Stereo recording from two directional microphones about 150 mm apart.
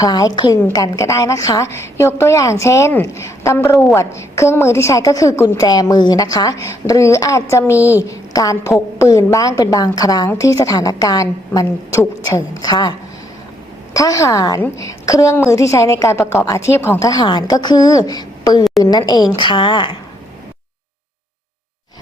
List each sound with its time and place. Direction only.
0.0 s a woman's voice: 25° left (ahead or behind)
7.8 s a woman's voice: 10° right (ahead or behind)
8.0 s a woman's voice: 20° left (ahead or behind)
13.9 s a woman's voice: 20° left (ahead or behind)